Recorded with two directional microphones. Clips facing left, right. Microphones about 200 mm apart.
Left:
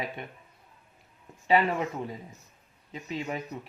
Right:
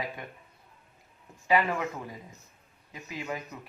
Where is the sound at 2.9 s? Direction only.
25° left (ahead or behind).